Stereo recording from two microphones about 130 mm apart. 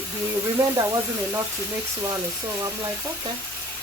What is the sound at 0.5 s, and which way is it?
Speech, 25° right (ahead or behind).